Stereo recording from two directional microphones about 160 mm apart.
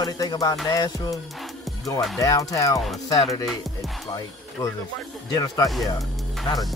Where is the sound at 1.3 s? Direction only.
Centre (ahead or behind).